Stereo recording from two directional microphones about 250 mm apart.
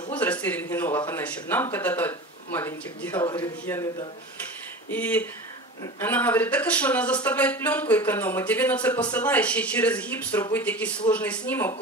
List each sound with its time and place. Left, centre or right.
0.1 s speech: centre